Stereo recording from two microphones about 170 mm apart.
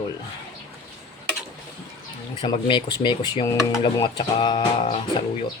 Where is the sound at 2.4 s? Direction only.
25° left (ahead or behind).